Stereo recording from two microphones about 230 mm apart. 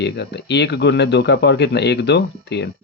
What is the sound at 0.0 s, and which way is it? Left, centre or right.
A man's voice, left.